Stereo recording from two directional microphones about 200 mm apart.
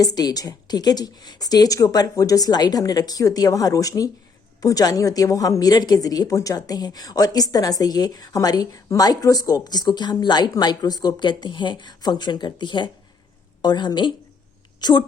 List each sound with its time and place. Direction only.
0.0 s a woman's voice: 20° left (ahead or behind)